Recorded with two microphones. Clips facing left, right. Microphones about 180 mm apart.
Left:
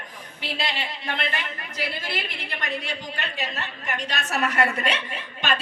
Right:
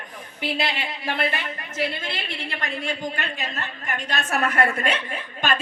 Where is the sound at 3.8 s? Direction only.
55° right (ahead or behind).